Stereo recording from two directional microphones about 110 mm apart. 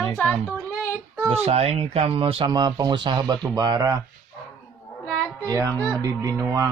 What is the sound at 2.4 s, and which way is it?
Speech, 40° right (ahead or behind).